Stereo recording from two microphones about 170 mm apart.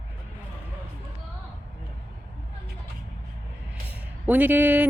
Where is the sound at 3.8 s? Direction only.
10° right (ahead or behind).